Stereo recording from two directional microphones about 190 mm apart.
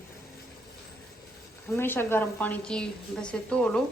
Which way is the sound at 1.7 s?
10° left (ahead or behind).